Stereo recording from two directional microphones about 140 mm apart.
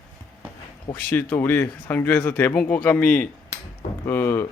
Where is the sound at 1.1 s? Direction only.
15° left (ahead or behind).